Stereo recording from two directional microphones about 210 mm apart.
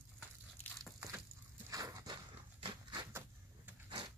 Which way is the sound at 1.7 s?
15° right (ahead or behind).